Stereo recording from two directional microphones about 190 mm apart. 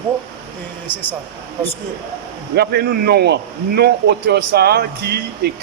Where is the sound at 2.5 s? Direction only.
55° right (ahead or behind).